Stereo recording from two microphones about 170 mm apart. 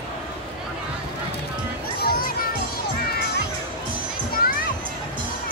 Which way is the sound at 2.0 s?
60° left (ahead or behind).